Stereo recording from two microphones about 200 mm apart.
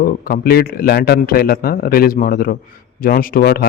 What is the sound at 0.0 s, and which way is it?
A man's voice, 50° left (ahead or behind).